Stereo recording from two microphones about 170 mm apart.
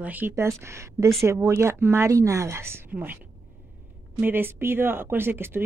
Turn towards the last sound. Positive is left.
turn(degrees=-15)  # may be behind; listen again after turning